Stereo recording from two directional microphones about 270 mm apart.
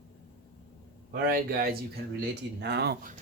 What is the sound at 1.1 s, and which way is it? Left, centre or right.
Speech, right.